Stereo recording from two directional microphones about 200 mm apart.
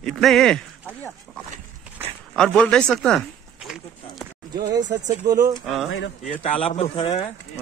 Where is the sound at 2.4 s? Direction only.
5° left (ahead or behind).